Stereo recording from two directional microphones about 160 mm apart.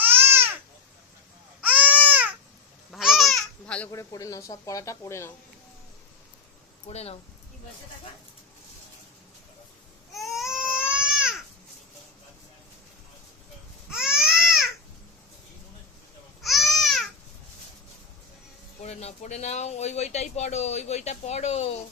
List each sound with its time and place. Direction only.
0.0 s babbling: 15° right (ahead or behind)
1.6 s baby cry: 10° right (ahead or behind)
2.9 s babbling: centre (ahead or behind)
3.9 s speech: 20° left (ahead or behind)
6.8 s speech: 40° left (ahead or behind)
10.1 s baby cry: centre (ahead or behind)
13.9 s baby cry: 5° right (ahead or behind)
16.4 s babbling: centre (ahead or behind)
18.8 s speech: 45° left (ahead or behind)